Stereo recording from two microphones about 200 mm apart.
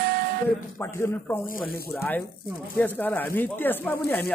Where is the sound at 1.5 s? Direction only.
50° left (ahead or behind).